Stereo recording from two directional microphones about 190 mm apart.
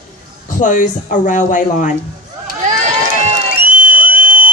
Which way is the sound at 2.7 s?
40° right (ahead or behind).